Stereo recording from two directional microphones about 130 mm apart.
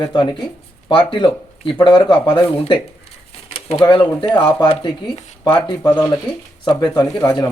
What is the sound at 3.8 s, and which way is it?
Speech, 35° left (ahead or behind).